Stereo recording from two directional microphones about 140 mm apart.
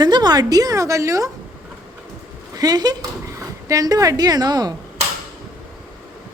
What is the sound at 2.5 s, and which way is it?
Speech, 30° right (ahead or behind).